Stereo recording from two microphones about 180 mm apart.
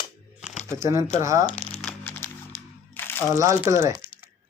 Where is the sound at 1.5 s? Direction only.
40° left (ahead or behind).